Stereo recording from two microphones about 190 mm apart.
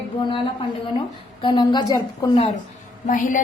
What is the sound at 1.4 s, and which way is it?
Speech, 25° left (ahead or behind).